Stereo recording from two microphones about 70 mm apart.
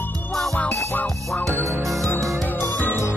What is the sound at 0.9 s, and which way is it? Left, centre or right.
Music, left.